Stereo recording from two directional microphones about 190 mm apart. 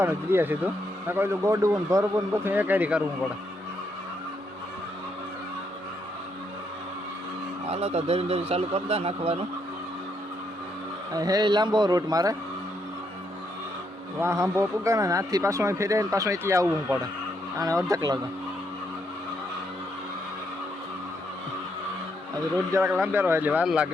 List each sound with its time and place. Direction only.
0.0 s speech: 10° right (ahead or behind)
7.7 s a man's voice: 35° right (ahead or behind)
11.1 s a man's voice: 20° right (ahead or behind)
14.2 s speech: 15° right (ahead or behind)
22.7 s speech: 10° right (ahead or behind)